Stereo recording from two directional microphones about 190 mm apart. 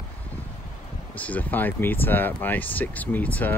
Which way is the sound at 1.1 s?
10° left (ahead or behind).